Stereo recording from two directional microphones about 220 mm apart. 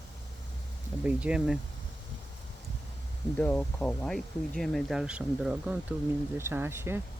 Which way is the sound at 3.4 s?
5° left (ahead or behind).